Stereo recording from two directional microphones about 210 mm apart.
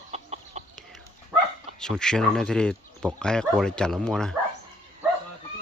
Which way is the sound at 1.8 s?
5° left (ahead or behind).